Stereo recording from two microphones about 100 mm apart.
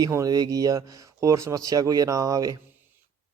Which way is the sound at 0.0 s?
35° right (ahead or behind).